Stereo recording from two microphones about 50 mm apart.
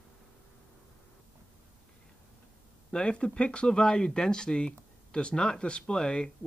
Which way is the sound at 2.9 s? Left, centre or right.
Centre.